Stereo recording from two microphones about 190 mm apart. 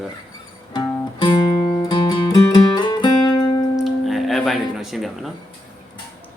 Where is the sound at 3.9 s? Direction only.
Centre (ahead or behind).